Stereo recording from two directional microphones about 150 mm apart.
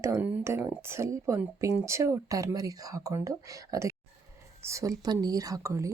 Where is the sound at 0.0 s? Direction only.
15° right (ahead or behind).